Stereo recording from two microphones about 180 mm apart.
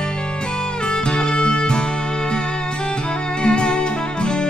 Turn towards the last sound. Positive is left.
turn(degrees=5)  # may be behind; listen again after turning